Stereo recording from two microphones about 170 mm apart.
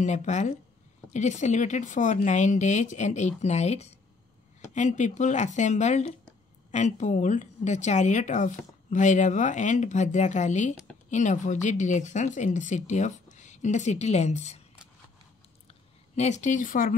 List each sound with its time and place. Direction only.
0.0 s a woman's voice: 45° left (ahead or behind)
16.2 s a woman's voice: 45° left (ahead or behind)